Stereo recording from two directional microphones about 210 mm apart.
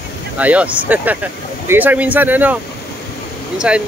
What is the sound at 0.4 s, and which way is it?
Speech, 5° right (ahead or behind).